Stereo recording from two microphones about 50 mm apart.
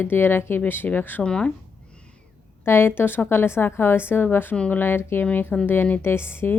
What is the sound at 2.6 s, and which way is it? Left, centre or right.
A woman's voice, left.